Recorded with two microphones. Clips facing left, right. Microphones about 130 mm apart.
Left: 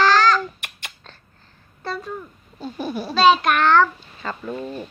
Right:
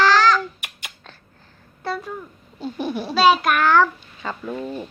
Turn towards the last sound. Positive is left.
turn(degrees=0)  # may be behind; listen again after turning